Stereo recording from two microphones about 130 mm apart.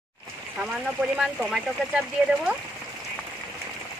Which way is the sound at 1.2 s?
5° right (ahead or behind).